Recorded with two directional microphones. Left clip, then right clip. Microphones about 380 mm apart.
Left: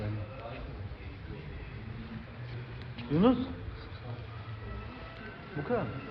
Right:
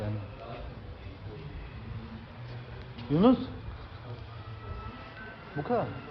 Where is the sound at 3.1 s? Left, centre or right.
Right.